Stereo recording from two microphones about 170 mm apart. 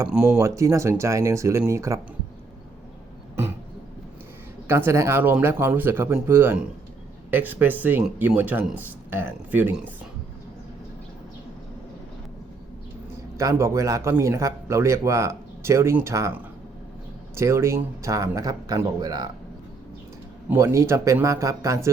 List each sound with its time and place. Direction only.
0.1 s speech: 5° right (ahead or behind)
0.3 s speech: 15° right (ahead or behind)
4.7 s speech: 15° right (ahead or behind)
13.3 s speech: 15° right (ahead or behind)
17.3 s a man's voice: 15° right (ahead or behind)
20.5 s speech: 15° right (ahead or behind)